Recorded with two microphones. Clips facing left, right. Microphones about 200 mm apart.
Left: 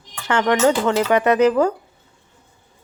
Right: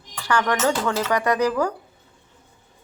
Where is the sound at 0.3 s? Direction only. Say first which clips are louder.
Left 5 dB; 25° left (ahead or behind).